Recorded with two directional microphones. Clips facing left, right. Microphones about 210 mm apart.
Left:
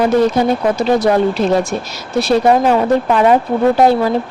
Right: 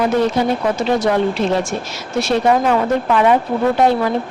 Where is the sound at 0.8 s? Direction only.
35° left (ahead or behind).